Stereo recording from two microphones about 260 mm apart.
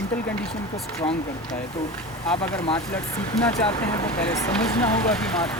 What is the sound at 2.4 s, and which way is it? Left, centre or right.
Speech, centre.